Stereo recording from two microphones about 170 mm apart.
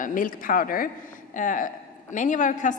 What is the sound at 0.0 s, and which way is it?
A woman's voice, 50° left (ahead or behind).